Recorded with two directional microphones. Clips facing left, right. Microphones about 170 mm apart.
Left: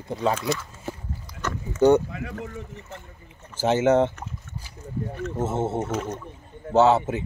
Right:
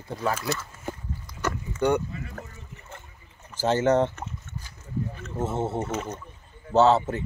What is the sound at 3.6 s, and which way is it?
Speech, 15° left (ahead or behind).